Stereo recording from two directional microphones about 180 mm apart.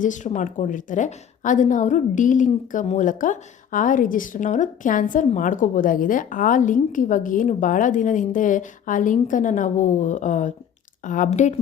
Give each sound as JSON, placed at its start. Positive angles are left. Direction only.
{"t": 0.0, "sound": "a woman's voice", "side_deg": 45}